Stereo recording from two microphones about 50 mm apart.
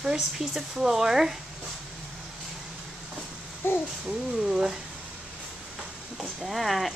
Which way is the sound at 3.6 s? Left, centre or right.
Left.